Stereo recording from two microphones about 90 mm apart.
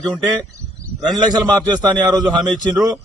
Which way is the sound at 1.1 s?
50° right (ahead or behind).